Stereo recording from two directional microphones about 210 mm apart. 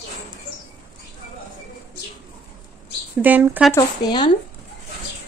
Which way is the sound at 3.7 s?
20° left (ahead or behind).